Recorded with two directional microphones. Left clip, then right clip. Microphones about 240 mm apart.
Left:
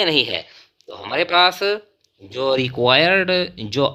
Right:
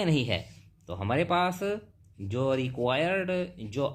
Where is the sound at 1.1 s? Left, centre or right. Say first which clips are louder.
Left 11 dB; left.